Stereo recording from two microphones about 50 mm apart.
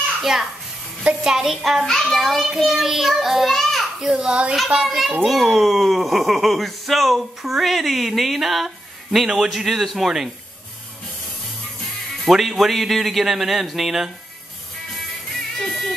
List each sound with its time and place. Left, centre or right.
0.2 s a child's voice: centre
3.5 s children playing: centre
4.0 s speech: centre
4.8 s speech: centre
12.3 s speech: centre
15.6 s music: centre